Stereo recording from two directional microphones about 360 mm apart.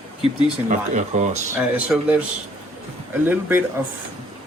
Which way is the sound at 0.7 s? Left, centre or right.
Centre.